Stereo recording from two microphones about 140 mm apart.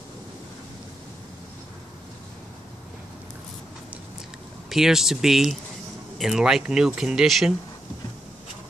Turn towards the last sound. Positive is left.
turn(degrees=0)  # may be behind; listen again after turning